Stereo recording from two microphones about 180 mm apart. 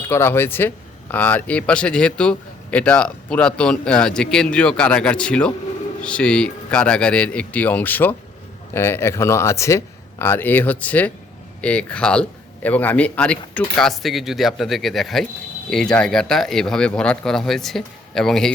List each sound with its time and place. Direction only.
0.1 s speech: 15° left (ahead or behind)